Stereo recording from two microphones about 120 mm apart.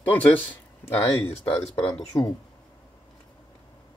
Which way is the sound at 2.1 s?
30° left (ahead or behind).